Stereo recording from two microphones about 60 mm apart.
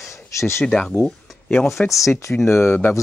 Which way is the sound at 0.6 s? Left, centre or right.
Centre.